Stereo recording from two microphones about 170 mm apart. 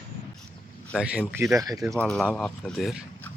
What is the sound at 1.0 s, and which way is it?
Speech, 5° right (ahead or behind).